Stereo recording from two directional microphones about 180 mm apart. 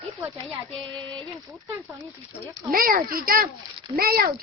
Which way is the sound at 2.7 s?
50° right (ahead or behind).